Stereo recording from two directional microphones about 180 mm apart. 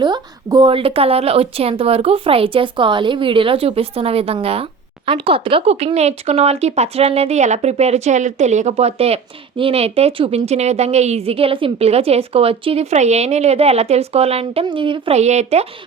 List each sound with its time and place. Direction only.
0.0 s speech: 25° right (ahead or behind)